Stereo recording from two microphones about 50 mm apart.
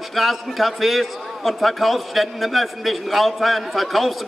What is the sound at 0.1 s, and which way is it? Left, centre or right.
A man's voice, centre.